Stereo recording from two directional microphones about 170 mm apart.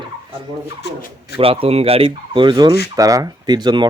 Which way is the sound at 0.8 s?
70° left (ahead or behind).